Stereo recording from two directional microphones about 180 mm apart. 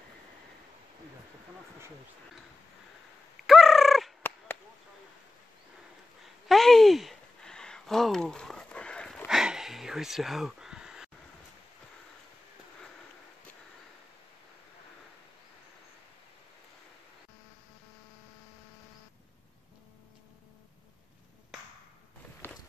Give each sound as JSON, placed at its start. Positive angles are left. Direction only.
{"t": 3.4, "sound": "fowl", "side_deg": 0}
{"t": 6.2, "sound": "a sound", "side_deg": 0}
{"t": 22.4, "sound": "walk", "side_deg": 10}